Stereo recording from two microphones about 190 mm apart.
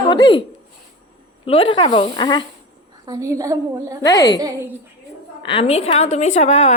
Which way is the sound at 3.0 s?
20° right (ahead or behind).